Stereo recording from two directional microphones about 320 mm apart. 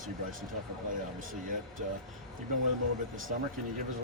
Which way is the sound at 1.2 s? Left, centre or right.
Right.